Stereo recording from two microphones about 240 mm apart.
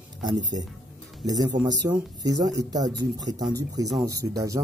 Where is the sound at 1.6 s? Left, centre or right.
Centre.